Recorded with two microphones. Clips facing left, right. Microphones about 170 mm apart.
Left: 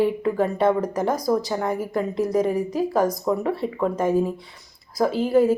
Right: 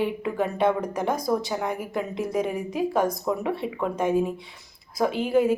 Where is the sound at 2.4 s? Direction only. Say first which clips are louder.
Left 6 dB; 40° left (ahead or behind).